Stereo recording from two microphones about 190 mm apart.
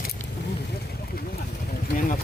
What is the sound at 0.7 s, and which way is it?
Vehicle, 55° left (ahead or behind).